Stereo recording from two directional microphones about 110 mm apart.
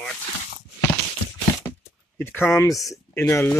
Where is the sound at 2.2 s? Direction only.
20° left (ahead or behind).